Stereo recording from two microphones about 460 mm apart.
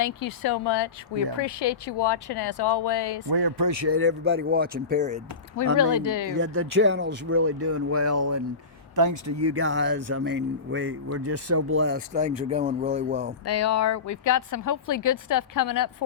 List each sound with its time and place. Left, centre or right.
0.0 s speech: left
3.2 s speech: right
3.8 s speech: right
5.7 s speech: left
6.3 s speech: right
13.4 s speech: left